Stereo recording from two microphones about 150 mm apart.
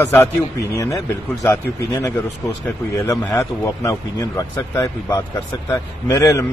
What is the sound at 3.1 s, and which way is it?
A man's voice, 20° left (ahead or behind).